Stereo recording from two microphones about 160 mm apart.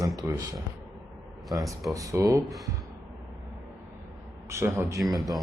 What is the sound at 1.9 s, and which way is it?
Speech, 20° right (ahead or behind).